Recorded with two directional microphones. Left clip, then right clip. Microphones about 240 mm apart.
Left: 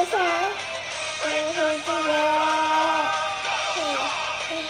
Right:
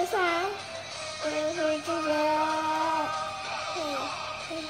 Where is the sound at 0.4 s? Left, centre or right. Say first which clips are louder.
Left 6 dB; left.